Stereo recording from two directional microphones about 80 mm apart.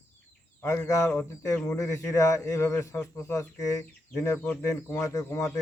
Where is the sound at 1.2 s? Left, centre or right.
Centre.